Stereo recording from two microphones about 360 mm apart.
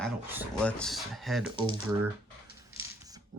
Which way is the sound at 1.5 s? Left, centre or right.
Centre.